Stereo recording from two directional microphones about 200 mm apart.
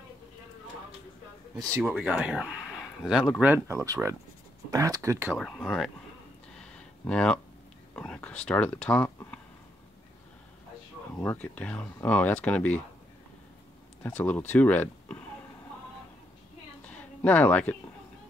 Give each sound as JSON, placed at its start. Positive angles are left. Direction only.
{"t": 1.8, "sound": "speech", "side_deg": -5}
{"t": 5.4, "sound": "speech", "side_deg": 0}
{"t": 6.6, "sound": "a sound", "side_deg": 5}
{"t": 11.2, "sound": "speech", "side_deg": 5}
{"t": 14.0, "sound": "speech", "side_deg": 10}
{"t": 16.8, "sound": "a sound", "side_deg": 5}